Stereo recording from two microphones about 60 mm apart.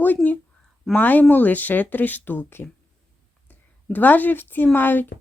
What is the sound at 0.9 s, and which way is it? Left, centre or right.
Speech, left.